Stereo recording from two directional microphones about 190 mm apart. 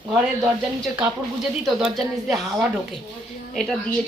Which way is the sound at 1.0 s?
5° right (ahead or behind).